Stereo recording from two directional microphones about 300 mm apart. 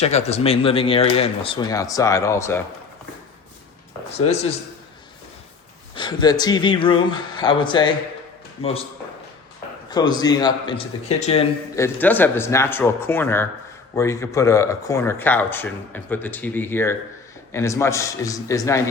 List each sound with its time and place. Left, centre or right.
0.0 s speech: left
5.9 s speech: centre
9.9 s speech: centre
11.8 s speech: centre